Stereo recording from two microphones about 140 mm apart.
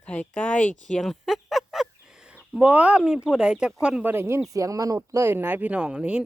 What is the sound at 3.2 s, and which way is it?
Speech, 5° right (ahead or behind).